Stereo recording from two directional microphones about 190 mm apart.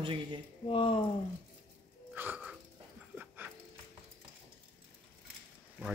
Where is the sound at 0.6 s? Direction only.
30° left (ahead or behind).